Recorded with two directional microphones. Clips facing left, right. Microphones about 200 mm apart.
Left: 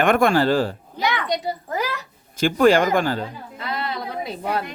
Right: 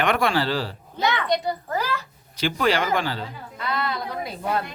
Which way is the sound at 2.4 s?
50° left (ahead or behind).